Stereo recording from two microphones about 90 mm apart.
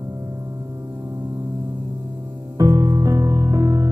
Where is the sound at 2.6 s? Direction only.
40° right (ahead or behind).